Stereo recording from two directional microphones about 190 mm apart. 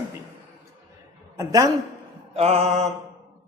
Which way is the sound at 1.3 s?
20° right (ahead or behind).